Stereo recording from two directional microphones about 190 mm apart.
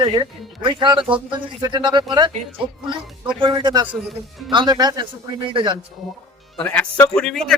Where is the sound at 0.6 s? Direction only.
25° right (ahead or behind).